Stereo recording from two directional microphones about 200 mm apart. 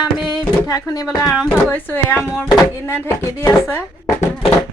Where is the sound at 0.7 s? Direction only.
15° left (ahead or behind).